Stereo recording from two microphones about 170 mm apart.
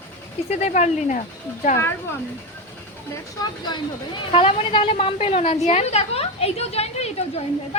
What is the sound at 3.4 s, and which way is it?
Speech, 25° left (ahead or behind).